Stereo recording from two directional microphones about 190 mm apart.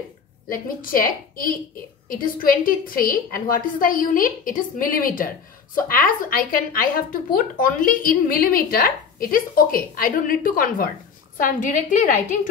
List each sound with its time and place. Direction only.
0.5 s speech: 50° left (ahead or behind)